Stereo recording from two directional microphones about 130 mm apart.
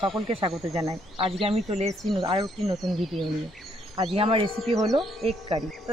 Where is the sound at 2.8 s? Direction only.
Centre (ahead or behind).